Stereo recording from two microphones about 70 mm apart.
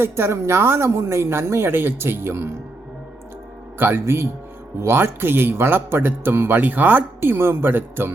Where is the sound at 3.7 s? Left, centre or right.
Right.